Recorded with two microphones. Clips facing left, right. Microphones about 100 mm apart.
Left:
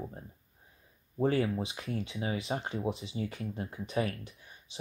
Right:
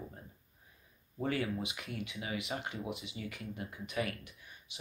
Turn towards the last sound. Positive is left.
turn(degrees=30)  # may be behind; listen again after turning